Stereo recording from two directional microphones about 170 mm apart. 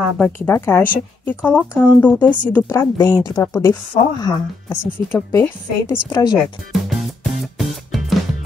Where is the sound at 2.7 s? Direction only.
20° left (ahead or behind).